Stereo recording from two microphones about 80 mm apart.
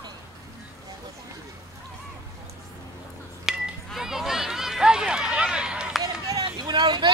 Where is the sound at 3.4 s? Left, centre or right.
Centre.